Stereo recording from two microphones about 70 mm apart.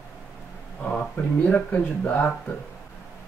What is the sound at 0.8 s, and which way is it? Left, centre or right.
Speech, left.